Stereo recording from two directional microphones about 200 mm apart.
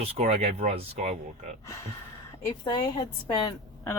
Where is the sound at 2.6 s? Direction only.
20° left (ahead or behind).